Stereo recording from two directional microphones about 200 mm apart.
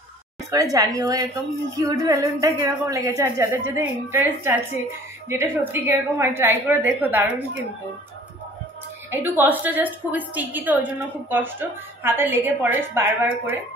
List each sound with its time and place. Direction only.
0.5 s a woman's voice: 15° right (ahead or behind)
9.1 s a woman's voice: 10° right (ahead or behind)